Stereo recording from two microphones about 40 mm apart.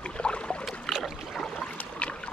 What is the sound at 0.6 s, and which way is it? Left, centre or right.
Boat, centre.